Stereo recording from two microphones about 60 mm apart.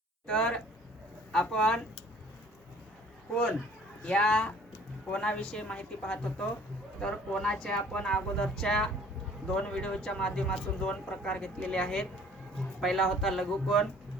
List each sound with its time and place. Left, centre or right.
0.3 s speech: centre
4.0 s speech: centre